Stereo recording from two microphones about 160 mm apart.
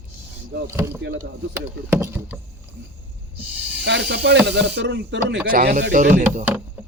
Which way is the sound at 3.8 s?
90° right.